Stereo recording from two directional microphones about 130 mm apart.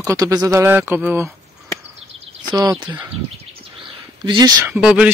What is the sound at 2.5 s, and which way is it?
Speech, 25° right (ahead or behind).